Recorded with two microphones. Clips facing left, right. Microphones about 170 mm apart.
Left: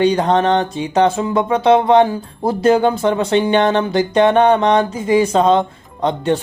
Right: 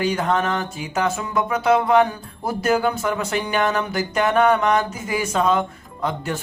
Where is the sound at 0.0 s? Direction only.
30° left (ahead or behind).